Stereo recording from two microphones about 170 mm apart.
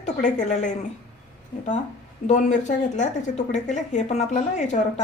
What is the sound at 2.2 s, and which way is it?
Speech, 45° left (ahead or behind).